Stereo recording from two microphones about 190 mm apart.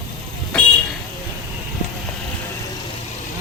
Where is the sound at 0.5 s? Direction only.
5° left (ahead or behind).